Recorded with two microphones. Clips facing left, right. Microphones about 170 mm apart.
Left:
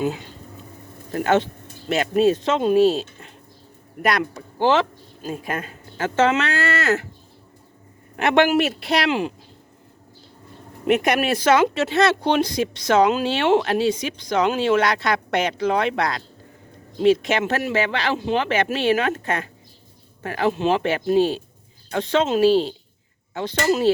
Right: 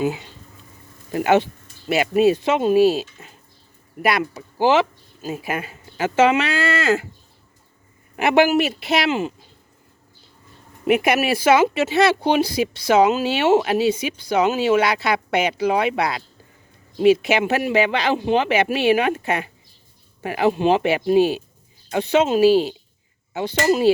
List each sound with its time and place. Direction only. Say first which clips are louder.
1.1 s speech: right 2 dB; 10° right (ahead or behind)
8.1 s a man's voice: right 1 dB; 5° right (ahead or behind)
10.8 s speech: right 1 dB; 5° right (ahead or behind)